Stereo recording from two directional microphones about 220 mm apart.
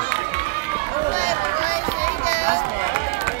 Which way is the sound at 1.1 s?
30° right (ahead or behind).